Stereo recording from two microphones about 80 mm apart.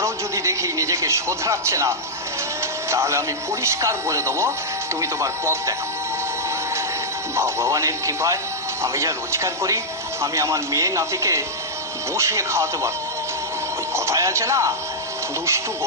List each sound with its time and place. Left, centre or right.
0.0 s a man's voice: right
7.3 s a man's voice: right
13.9 s speech: right